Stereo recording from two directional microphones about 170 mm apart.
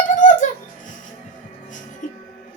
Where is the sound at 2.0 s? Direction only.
45° left (ahead or behind).